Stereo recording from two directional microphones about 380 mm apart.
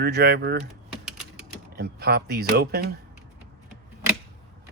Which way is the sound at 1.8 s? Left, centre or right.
Right.